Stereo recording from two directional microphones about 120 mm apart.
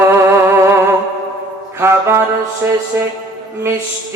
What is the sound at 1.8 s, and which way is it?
Speech, 20° right (ahead or behind).